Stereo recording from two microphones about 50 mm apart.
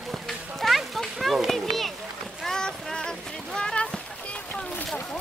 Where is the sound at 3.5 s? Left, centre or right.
Centre.